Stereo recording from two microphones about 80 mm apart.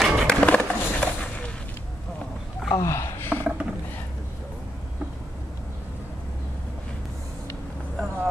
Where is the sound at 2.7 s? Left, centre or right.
Left.